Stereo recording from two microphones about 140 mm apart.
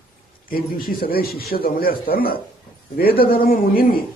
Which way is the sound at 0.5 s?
90° left.